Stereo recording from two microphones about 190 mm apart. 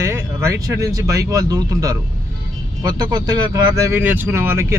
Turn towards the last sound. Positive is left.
turn(degrees=-10)  # may be behind; listen again after turning